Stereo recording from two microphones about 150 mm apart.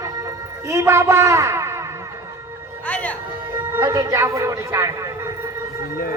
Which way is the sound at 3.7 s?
20° right (ahead or behind).